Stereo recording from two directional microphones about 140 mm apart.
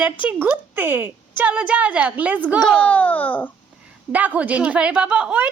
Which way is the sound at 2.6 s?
5° left (ahead or behind).